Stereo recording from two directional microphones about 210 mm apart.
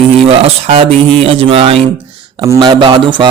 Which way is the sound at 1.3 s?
25° right (ahead or behind).